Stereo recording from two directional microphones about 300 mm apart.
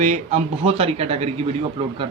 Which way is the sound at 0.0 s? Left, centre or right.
Right.